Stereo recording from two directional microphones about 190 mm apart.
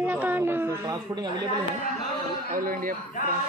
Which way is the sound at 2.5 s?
45° right (ahead or behind).